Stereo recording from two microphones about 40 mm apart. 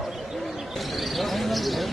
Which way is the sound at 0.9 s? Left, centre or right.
Centre.